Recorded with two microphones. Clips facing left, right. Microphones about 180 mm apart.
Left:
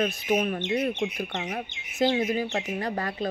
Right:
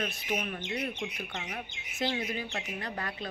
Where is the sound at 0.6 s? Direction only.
25° left (ahead or behind).